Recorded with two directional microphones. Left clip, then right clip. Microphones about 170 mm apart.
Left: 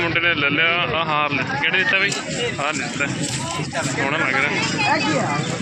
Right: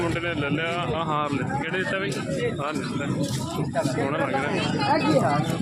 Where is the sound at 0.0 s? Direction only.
10° right (ahead or behind).